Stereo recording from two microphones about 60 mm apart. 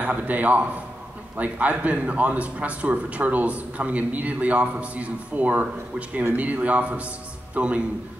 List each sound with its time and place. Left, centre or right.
0.0 s a man's voice: right